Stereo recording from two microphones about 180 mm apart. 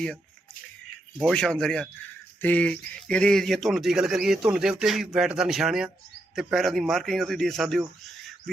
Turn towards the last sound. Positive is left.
turn(degrees=0)  # may be behind; listen again after turning